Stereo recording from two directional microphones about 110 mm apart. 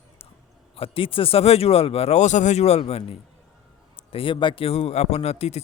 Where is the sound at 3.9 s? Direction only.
55° left (ahead or behind); by 5.6 s 75° left (ahead or behind).